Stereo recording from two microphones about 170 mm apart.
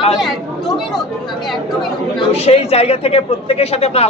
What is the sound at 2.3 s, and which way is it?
Speech, 35° left (ahead or behind).